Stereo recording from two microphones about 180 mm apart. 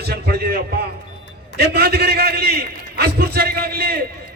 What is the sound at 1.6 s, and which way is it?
A man's voice, 60° right (ahead or behind).